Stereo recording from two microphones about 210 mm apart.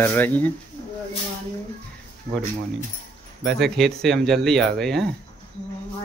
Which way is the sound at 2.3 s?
45° right (ahead or behind).